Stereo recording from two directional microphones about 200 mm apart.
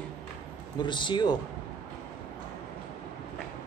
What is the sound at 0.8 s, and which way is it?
Speech, 25° left (ahead or behind).